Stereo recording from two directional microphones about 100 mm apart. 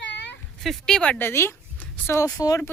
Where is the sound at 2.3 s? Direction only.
40° left (ahead or behind).